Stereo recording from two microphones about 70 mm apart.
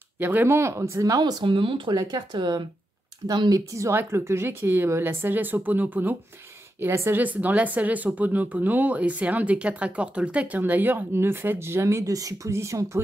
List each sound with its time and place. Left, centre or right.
0.2 s speech: right
0.6 s speech: right
1.1 s speech: right
3.3 s speech: right
4.1 s speech: right
7.2 s speech: right
12.1 s speech: right